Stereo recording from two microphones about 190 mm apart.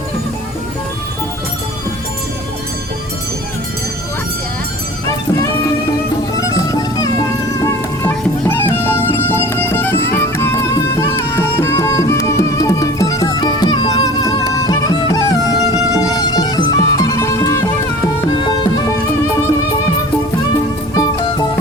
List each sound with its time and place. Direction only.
5.0 s music: 15° left (ahead or behind)